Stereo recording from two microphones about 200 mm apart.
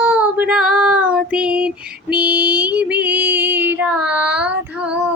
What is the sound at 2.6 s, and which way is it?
Female singing, 10° right (ahead or behind).